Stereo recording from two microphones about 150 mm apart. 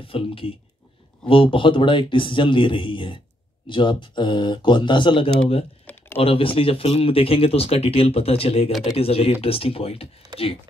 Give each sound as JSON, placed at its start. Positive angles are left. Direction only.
{"t": 0.0, "sound": "speech", "side_deg": 40}